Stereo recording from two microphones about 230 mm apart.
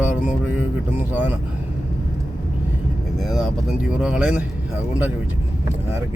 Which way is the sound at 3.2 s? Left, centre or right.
Centre.